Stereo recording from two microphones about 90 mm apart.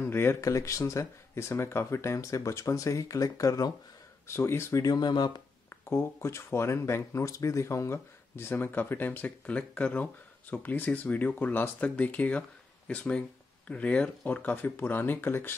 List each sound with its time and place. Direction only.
0.0 s speech: 25° left (ahead or behind)
4.3 s speech: 30° left (ahead or behind)
4.8 s speech: 50° left (ahead or behind)
5.7 s speech: 25° left (ahead or behind)